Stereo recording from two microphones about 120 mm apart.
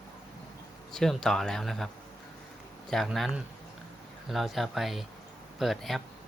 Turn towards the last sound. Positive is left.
turn(degrees=0)  # may be behind; listen again after turning